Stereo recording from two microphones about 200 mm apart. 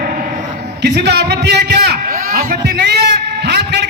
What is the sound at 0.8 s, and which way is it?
A man's voice, 55° right (ahead or behind).